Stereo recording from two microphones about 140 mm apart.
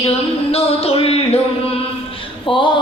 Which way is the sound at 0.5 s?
45° left (ahead or behind).